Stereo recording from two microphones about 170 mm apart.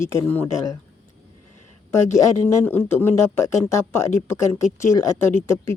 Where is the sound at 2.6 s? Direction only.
10° left (ahead or behind).